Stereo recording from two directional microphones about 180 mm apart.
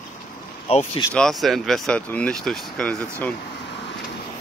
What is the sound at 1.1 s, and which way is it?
Speech, centre (ahead or behind).